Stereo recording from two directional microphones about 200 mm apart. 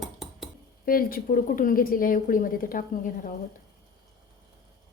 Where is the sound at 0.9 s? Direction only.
45° left (ahead or behind).